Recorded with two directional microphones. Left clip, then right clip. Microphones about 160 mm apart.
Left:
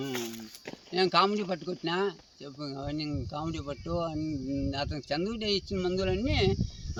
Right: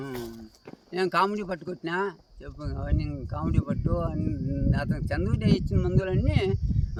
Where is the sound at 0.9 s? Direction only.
10° right (ahead or behind).